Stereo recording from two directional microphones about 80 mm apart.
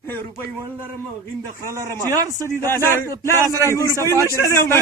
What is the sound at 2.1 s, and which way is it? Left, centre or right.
Speech, right.